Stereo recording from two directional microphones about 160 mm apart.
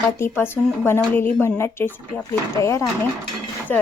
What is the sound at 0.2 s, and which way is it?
Speech, 15° left (ahead or behind).